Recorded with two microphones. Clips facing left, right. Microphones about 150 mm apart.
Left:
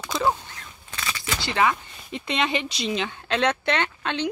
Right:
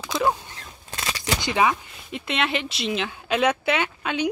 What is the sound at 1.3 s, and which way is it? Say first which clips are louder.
Speech: right 1 dB; 15° right (ahead or behind).